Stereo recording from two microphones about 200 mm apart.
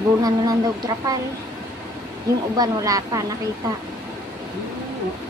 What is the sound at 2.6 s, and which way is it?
Speech, 15° right (ahead or behind).